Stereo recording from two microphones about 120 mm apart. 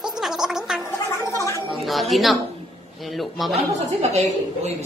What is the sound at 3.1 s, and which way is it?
Speech, centre (ahead or behind).